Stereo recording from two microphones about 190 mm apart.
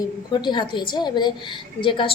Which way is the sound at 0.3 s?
25° left (ahead or behind).